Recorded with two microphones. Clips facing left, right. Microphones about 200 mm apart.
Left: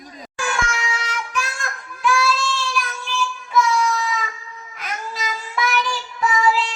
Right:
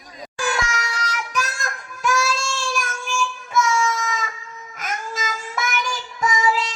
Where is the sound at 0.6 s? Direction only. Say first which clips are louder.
Left 1 dB; 40° right (ahead or behind).